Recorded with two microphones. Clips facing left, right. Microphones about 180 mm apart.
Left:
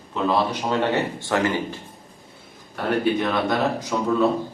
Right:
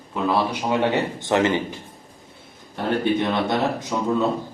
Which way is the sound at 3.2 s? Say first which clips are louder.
Even; 20° right (ahead or behind).